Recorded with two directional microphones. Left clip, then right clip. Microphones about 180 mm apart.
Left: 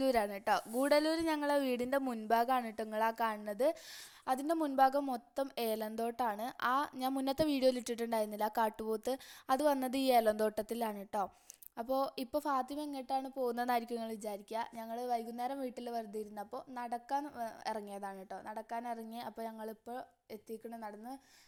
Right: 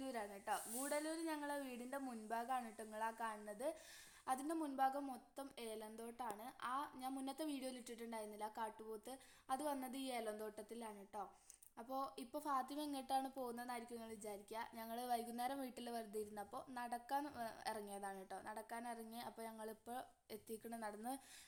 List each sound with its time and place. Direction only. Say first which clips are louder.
0.0 s a woman's voice: left 16 dB; 65° left (ahead or behind)
11.8 s a woman's voice: left 12 dB; 45° left (ahead or behind); by 13.5 s 30° left (ahead or behind)
13.5 s speech: left 15 dB; 55° left (ahead or behind)
14.8 s a woman's voice: left 4 dB; 25° left (ahead or behind)